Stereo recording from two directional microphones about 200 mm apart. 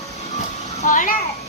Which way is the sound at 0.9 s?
40° left (ahead or behind).